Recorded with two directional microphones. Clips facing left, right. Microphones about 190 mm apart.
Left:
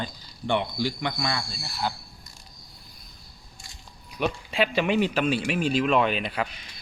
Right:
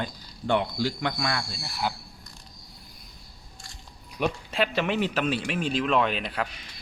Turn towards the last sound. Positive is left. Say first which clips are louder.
# left 2 dB
turn(degrees=0)  # may be behind; listen again after turning